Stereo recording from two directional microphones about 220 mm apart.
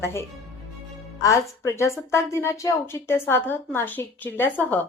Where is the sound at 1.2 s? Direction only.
15° left (ahead or behind).